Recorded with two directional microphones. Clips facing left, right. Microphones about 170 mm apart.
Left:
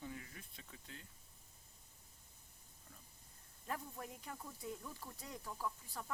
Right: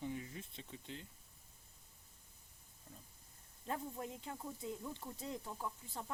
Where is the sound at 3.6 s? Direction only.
25° right (ahead or behind).